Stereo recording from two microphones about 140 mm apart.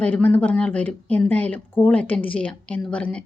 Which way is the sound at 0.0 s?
10° left (ahead or behind).